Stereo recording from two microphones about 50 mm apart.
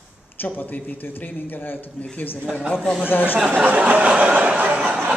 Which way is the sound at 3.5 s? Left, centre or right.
Right.